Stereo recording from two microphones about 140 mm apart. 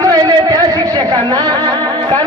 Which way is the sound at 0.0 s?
30° right (ahead or behind).